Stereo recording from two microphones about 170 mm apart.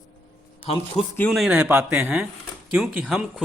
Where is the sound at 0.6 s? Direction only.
35° left (ahead or behind).